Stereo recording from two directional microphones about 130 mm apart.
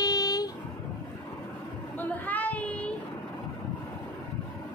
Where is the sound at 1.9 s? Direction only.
10° left (ahead or behind).